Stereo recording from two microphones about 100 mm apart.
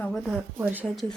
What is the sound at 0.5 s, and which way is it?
Speech, 15° right (ahead or behind).